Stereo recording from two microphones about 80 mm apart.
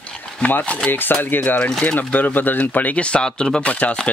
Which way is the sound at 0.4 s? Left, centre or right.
Left.